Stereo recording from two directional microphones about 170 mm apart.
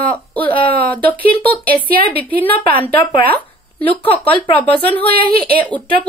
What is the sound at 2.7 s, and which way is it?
Speech, 30° left (ahead or behind).